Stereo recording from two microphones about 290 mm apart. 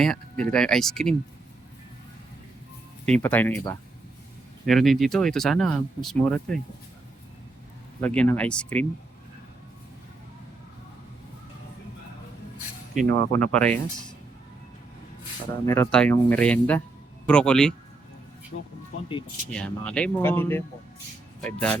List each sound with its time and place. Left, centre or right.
0.0 s speech: centre
3.1 s speech: centre
8.0 s speech: centre
13.1 s speech: centre
15.6 s speech: centre
18.5 s speech: left
19.5 s speech: centre